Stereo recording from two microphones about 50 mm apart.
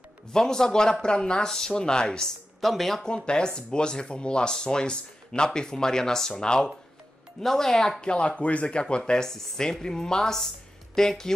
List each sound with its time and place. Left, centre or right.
0.3 s speech: centre
2.6 s speech: centre
3.3 s speech: centre
8.1 s speech: left